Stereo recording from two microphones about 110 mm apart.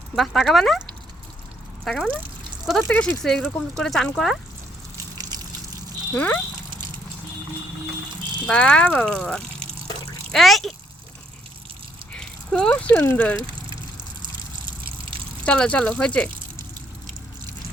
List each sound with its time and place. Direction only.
0.2 s speech: centre (ahead or behind)
1.8 s speech: 5° left (ahead or behind)
2.9 s speech: 15° left (ahead or behind)
3.2 s speech: 5° left (ahead or behind)
5.1 s water: 35° right (ahead or behind)
6.1 s speech: 15° left (ahead or behind)
6.7 s a sound: 45° right (ahead or behind)
8.4 s speech: 10° left (ahead or behind)
12.1 s speech: 10° left (ahead or behind)
15.4 s speech: 10° left (ahead or behind)